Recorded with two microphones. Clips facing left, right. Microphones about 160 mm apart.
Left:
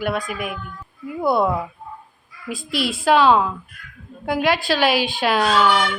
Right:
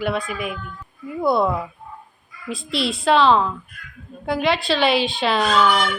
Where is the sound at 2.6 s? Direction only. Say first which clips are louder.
Even; 25° right (ahead or behind).